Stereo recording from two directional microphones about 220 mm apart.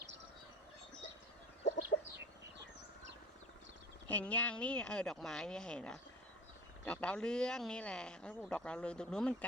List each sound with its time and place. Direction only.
1.6 s chicken: 35° left (ahead or behind)
4.1 s speech: 5° left (ahead or behind)